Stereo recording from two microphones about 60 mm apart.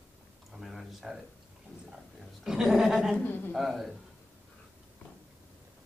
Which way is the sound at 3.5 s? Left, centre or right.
Centre.